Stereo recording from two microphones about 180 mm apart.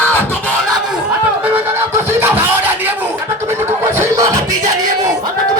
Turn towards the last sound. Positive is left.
turn(degrees=-20)  # may be behind; listen again after turning